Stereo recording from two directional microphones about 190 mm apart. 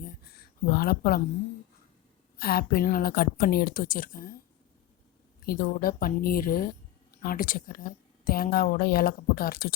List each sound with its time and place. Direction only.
0.0 s a sound: 50° left (ahead or behind)
2.4 s a woman's voice: 55° left (ahead or behind)
5.5 s a woman's voice: 50° left (ahead or behind)